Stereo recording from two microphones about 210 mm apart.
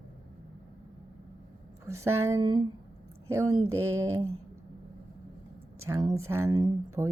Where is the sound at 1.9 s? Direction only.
15° right (ahead or behind).